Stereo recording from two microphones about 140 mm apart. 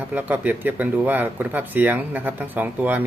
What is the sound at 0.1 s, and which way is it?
Speech, 10° right (ahead or behind).